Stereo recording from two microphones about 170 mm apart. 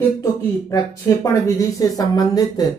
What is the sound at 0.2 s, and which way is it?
Speech, 20° left (ahead or behind).